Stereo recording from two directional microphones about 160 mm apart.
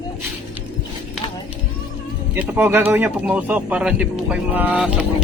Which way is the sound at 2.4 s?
10° right (ahead or behind).